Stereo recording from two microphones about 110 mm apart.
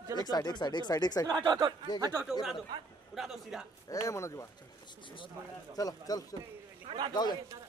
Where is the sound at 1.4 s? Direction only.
40° right (ahead or behind).